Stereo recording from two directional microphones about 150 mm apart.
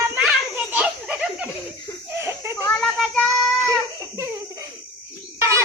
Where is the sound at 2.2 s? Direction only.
15° right (ahead or behind).